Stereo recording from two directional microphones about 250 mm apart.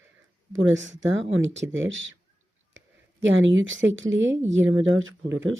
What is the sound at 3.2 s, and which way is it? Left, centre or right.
Speech, right.